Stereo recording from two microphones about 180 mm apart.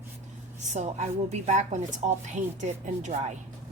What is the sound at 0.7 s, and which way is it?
A woman's voice, 40° right (ahead or behind).